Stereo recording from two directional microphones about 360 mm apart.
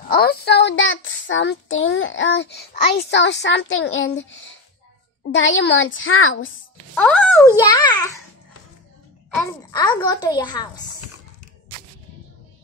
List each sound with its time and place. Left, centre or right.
0.1 s child singing: left
7.0 s a child's voice: centre
9.4 s a child's voice: centre